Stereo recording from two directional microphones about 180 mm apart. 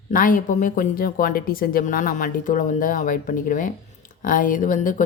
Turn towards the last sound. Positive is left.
turn(degrees=45)  # may be behind; listen again after turning